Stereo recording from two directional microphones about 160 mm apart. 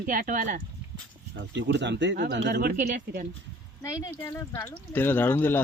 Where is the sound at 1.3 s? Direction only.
90° right; by 3.2 s 65° right (ahead or behind).